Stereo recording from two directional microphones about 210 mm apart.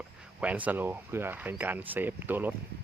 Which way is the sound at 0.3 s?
5° right (ahead or behind).